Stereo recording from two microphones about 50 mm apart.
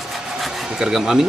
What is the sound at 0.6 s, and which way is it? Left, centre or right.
Speech, centre.